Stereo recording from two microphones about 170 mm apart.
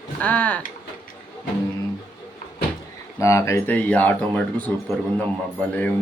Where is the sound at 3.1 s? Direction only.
15° left (ahead or behind).